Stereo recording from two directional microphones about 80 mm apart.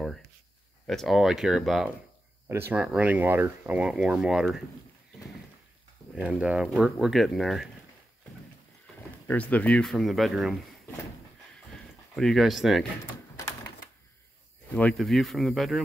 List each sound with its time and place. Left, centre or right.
0.8 s speech: centre
2.4 s speech: right
3.0 s speech: centre
6.1 s speech: centre
6.6 s speech: centre
9.3 s speech: centre
9.8 s speech: centre
12.2 s speech: centre
14.7 s speech: centre
15.0 s speech: centre